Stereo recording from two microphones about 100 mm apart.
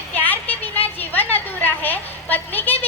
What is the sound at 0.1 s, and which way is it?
Vehicle, 20° left (ahead or behind).